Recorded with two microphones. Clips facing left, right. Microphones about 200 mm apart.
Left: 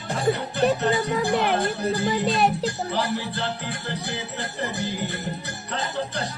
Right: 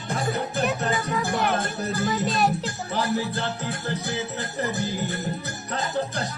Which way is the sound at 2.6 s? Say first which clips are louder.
Left 1 dB; 45° right (ahead or behind).